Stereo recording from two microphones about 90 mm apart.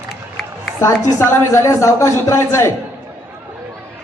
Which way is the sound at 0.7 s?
30° left (ahead or behind).